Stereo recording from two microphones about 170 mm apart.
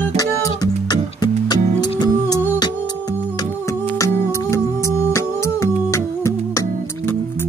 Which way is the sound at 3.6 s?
15° left (ahead or behind).